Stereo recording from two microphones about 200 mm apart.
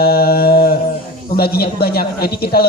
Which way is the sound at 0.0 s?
50° left (ahead or behind).